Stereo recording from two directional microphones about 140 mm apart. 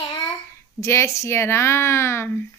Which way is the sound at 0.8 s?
20° left (ahead or behind).